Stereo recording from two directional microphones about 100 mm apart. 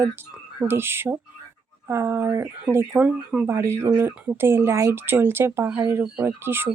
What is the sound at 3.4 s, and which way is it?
Speech, 25° right (ahead or behind).